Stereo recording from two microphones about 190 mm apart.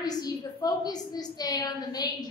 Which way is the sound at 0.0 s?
20° left (ahead or behind).